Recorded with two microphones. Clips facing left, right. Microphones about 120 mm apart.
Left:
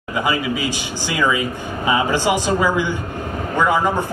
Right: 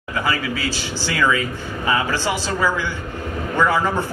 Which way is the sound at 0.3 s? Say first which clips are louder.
Left 2 dB; 15° left (ahead or behind).